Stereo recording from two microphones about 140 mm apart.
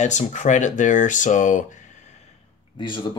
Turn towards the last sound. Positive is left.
turn(degrees=35)  # may be behind; listen again after turning